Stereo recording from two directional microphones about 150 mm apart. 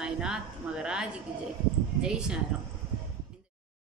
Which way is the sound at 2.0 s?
5° right (ahead or behind).